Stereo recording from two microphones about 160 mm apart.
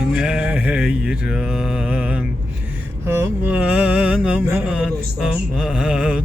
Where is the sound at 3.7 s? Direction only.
5° right (ahead or behind).